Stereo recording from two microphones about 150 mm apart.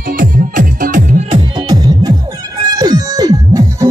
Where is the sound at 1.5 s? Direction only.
25° right (ahead or behind).